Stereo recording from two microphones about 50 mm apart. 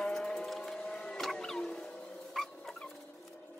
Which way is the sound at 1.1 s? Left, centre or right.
Centre.